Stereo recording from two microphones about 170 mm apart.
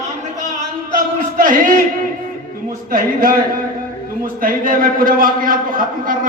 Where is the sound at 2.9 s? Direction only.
55° right (ahead or behind).